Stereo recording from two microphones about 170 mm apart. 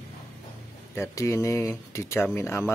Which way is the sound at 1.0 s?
15° left (ahead or behind).